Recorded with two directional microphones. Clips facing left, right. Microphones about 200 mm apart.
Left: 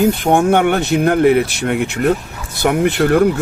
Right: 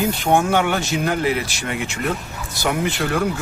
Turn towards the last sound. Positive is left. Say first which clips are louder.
# left 8 dB
turn(degrees=55)  # may be behind; listen again after turning